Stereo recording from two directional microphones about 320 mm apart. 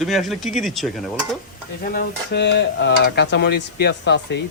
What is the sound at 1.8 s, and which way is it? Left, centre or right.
Speech, left.